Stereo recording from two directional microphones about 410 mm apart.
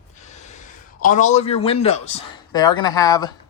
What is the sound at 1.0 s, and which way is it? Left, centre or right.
Speech, centre.